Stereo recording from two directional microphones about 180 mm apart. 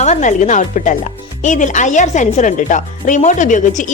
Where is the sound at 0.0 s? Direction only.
40° left (ahead or behind).